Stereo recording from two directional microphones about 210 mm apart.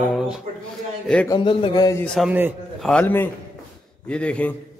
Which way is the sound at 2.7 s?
5° left (ahead or behind).